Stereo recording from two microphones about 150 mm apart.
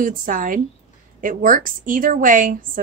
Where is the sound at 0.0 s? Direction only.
65° right (ahead or behind).